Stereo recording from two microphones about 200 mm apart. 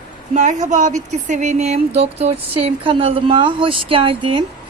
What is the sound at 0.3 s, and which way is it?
Speech, 40° right (ahead or behind).